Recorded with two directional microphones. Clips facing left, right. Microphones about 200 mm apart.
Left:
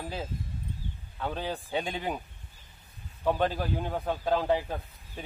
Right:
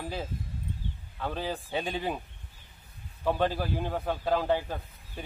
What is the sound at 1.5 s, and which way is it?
Speech, 15° left (ahead or behind).